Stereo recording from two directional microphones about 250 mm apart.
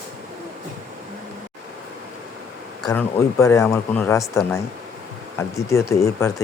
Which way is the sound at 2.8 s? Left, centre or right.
Centre.